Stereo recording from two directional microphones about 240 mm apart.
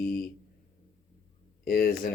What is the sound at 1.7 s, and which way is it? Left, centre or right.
Speech, left.